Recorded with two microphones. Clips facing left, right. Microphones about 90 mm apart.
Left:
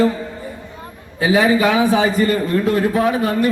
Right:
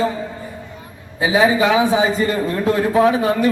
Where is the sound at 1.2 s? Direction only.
20° right (ahead or behind).